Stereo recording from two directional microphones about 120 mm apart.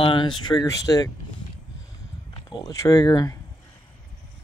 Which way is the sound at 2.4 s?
30° left (ahead or behind).